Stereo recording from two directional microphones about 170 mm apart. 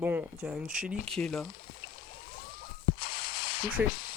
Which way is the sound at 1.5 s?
55° left (ahead or behind).